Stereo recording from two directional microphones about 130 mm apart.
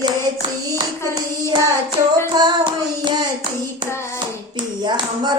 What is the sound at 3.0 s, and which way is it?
Hands, 35° right (ahead or behind).